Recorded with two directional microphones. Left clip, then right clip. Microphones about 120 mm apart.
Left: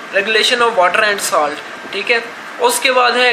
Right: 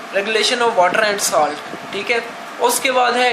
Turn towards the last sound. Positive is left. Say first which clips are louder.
# left 3 dB
turn(degrees=-25)  # may be behind; listen again after turning